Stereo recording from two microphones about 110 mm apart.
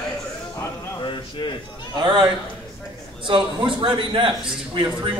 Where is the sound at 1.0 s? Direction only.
45° left (ahead or behind).